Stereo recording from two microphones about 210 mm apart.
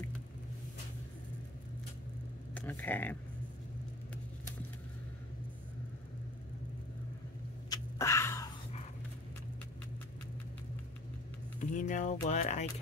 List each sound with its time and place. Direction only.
2.5 s speech: 10° left (ahead or behind)
7.7 s a sound: 15° left (ahead or behind)
11.7 s speech: 35° left (ahead or behind)